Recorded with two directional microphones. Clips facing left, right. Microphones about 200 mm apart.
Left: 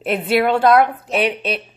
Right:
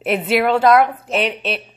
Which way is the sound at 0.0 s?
5° right (ahead or behind).